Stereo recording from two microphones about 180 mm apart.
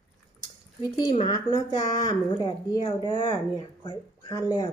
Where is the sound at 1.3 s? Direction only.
20° left (ahead or behind).